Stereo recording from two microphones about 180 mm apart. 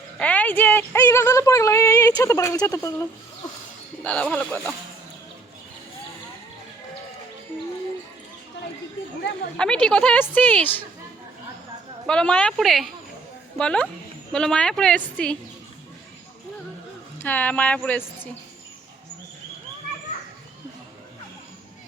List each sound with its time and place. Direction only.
0.2 s speech: 10° left (ahead or behind)
4.0 s speech: 5° left (ahead or behind)
9.6 s speech: 5° left (ahead or behind)
12.0 s speech: 5° left (ahead or behind)
17.2 s speech: 10° left (ahead or behind)